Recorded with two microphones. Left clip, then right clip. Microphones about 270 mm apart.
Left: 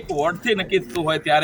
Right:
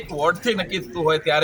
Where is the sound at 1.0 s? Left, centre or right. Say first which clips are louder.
Right 1 dB; centre.